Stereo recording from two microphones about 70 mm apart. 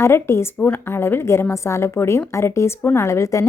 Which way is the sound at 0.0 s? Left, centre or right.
Left.